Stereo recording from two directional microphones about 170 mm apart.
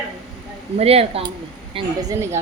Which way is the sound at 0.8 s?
35° right (ahead or behind).